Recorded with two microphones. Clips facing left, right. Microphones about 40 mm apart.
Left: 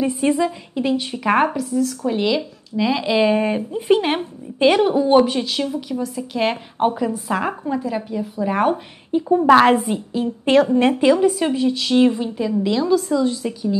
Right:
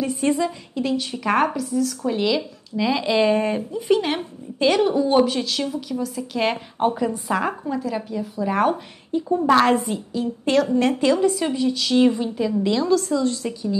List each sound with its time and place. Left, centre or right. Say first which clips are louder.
0.1 s speech: left 2 dB; centre
3.9 s a woman's voice: left 3 dB; left
9.1 s a woman's voice: left 5 dB; left